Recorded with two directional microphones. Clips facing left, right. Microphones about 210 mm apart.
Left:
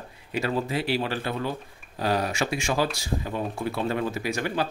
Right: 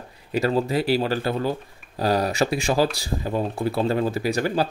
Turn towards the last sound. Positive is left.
turn(degrees=-35)  # may be behind; listen again after turning